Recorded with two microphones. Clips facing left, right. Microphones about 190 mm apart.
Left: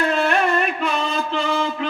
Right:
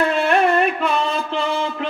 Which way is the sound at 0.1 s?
60° right (ahead or behind).